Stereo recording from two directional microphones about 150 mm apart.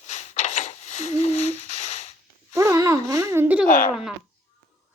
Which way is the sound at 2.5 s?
20° right (ahead or behind).